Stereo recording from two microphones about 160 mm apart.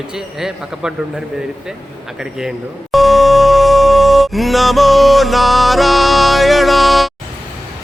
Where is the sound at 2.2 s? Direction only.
5° right (ahead or behind).